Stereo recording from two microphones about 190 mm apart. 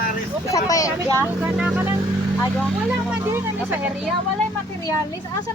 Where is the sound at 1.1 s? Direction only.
10° right (ahead or behind).